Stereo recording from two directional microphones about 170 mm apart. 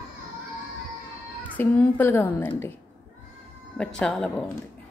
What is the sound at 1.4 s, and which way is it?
A child's voice, 10° left (ahead or behind).